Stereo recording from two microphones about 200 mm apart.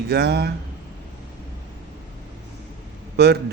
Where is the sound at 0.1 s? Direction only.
55° right (ahead or behind).